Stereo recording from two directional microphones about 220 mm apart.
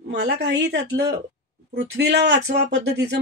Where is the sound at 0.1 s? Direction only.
50° right (ahead or behind).